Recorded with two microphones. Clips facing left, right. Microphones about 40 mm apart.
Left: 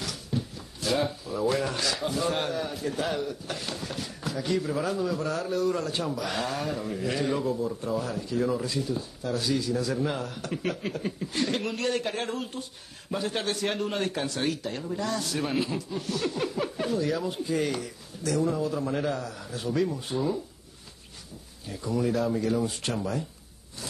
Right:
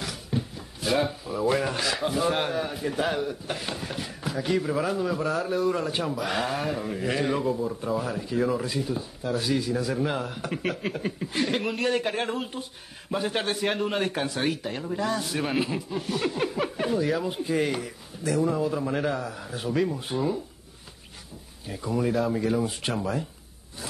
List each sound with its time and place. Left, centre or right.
0.0 s speech: centre
10.6 s speech: centre
10.9 s speech: centre
21.6 s speech: centre